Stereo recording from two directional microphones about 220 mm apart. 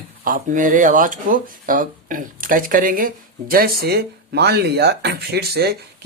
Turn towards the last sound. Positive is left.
turn(degrees=-45)  # may be behind; listen again after turning